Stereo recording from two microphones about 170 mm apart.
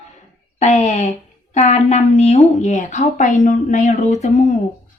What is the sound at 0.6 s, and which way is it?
A woman's voice, 45° left (ahead or behind).